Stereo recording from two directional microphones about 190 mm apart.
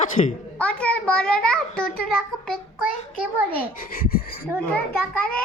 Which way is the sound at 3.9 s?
50° left (ahead or behind).